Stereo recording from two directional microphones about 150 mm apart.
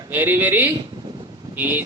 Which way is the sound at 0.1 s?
15° right (ahead or behind).